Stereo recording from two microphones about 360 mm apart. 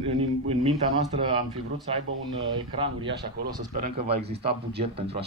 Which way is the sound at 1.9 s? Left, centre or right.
Centre.